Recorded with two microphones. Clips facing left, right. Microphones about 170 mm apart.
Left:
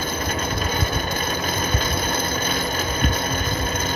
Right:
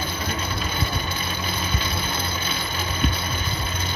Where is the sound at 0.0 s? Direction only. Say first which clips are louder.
Left 3 dB; 45° left (ahead or behind).